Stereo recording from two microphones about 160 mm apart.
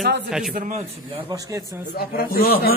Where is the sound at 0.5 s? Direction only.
55° right (ahead or behind).